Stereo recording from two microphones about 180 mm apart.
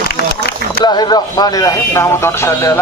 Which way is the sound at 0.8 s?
25° left (ahead or behind).